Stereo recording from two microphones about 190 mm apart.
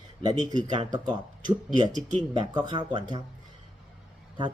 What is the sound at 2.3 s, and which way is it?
Speech, 25° right (ahead or behind).